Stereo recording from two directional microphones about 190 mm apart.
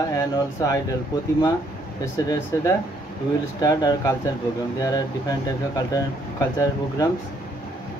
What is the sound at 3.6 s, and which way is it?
Speech, 20° left (ahead or behind).